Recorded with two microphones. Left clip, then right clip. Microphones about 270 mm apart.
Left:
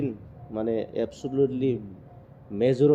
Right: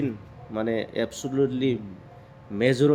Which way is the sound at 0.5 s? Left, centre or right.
Centre.